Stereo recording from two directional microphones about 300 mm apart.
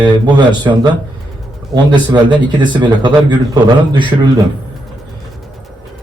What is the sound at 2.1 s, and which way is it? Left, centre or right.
Speech, centre.